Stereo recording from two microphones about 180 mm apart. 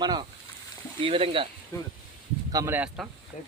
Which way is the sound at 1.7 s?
15° left (ahead or behind).